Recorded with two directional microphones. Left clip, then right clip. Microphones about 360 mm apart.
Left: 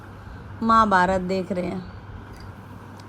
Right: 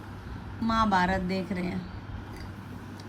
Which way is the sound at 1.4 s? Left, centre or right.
Centre.